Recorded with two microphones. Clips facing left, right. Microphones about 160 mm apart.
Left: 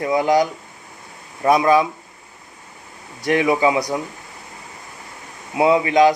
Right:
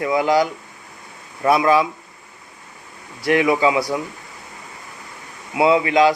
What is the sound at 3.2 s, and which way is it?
Speech, 25° left (ahead or behind).